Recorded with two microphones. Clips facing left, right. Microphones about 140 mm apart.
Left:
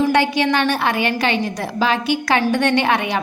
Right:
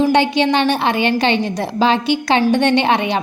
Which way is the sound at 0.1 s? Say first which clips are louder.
Right 2 dB; 20° right (ahead or behind).